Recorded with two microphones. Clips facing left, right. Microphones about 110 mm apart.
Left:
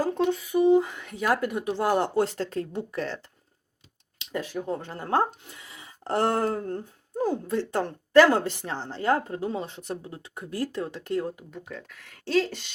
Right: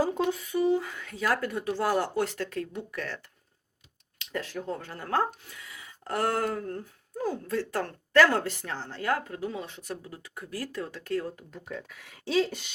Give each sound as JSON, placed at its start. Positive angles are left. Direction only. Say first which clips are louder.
{"t": 0.0, "sound": "a sound", "louder": "left 2 dB", "side_deg": -5}
{"t": 0.5, "sound": "speech", "louder": "left 7 dB", "side_deg": 20}
{"t": 4.2, "sound": "speech", "louder": "left 3 dB", "side_deg": 15}
{"t": 11.5, "sound": "speech", "louder": "even", "side_deg": 0}